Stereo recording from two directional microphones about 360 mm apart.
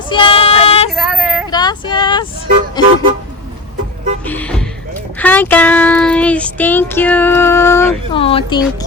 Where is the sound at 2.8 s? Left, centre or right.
Centre.